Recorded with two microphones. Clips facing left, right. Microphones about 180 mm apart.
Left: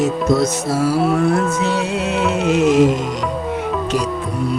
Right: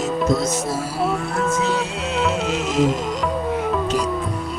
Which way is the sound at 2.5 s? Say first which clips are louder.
Left 8 dB; 60° left (ahead or behind).